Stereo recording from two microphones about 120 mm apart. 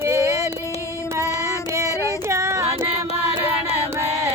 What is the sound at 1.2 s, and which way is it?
Child singing, 25° left (ahead or behind).